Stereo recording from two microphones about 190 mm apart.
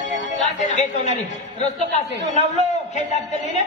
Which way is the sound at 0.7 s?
40° left (ahead or behind).